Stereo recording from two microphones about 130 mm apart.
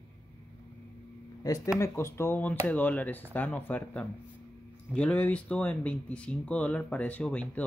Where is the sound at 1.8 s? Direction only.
20° left (ahead or behind).